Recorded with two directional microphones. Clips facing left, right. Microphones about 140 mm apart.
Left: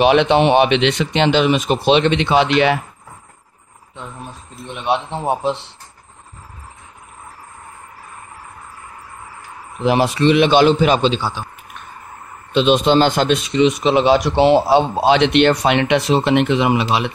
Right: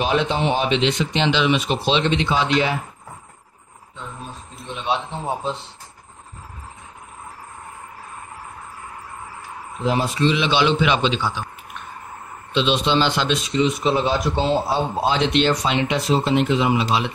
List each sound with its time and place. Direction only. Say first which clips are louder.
0.0 s speech: left 8 dB; 75° left (ahead or behind)
4.6 s speech: left 4 dB; 60° left (ahead or behind)
9.8 s a man's voice: left 5 dB; 75° left (ahead or behind); by 11.4 s 30° left (ahead or behind)
12.5 s speech: left 6 dB; 50° left (ahead or behind); by 17.1 s 65° left (ahead or behind)